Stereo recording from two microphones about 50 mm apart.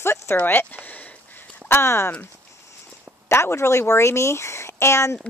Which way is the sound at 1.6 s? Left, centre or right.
Left.